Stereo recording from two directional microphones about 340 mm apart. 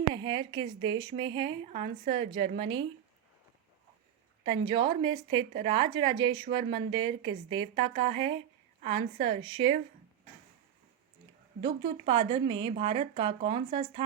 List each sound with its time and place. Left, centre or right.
0.1 s a woman's voice: centre
4.4 s a woman's voice: centre
11.6 s a woman's voice: centre